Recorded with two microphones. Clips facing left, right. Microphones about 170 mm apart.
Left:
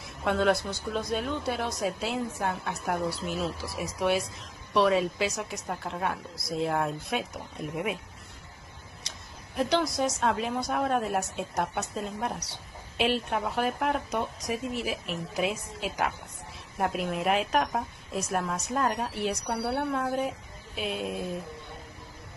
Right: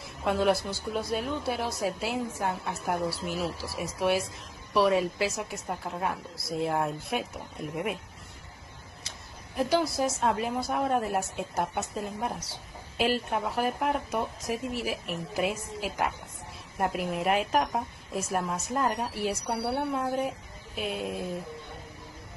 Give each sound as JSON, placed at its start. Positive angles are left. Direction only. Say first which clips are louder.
{"t": 0.2, "sound": "a woman's voice", "louder": "even", "side_deg": 0}
{"t": 9.6, "sound": "a woman's voice", "louder": "even", "side_deg": -5}